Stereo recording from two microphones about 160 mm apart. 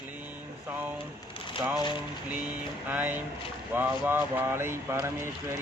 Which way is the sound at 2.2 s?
10° right (ahead or behind).